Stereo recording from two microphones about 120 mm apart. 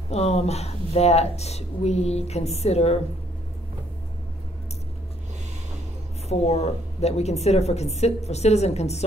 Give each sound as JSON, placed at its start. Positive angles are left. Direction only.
{"t": 0.1, "sound": "speech", "side_deg": 60}
{"t": 6.2, "sound": "speech", "side_deg": 65}